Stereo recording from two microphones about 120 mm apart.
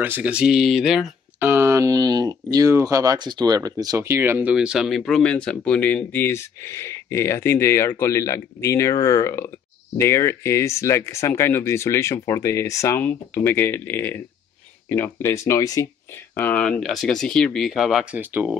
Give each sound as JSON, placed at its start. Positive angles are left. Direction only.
{"t": 0.0, "sound": "speech", "side_deg": -15}
{"t": 1.4, "sound": "speech", "side_deg": -20}
{"t": 4.6, "sound": "speech", "side_deg": -5}
{"t": 16.3, "sound": "speech", "side_deg": 10}
{"t": 18.1, "sound": "speech", "side_deg": -15}